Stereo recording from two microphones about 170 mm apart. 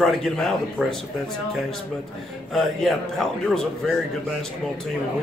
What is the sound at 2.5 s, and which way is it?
A man's voice, centre (ahead or behind).